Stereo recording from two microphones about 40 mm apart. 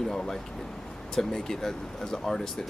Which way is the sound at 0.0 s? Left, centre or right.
Centre.